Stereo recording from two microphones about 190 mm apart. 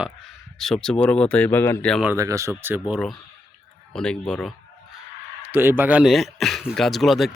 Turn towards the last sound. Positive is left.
turn(degrees=0)  # may be behind; listen again after turning